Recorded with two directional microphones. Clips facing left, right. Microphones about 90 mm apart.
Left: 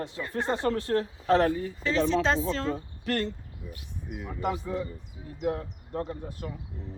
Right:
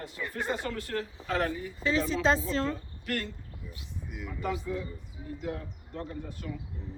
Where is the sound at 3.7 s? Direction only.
50° left (ahead or behind).